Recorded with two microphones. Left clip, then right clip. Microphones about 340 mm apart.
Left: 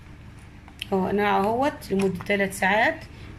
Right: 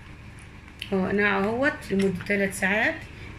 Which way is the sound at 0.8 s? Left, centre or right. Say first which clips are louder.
Left 1 dB; left.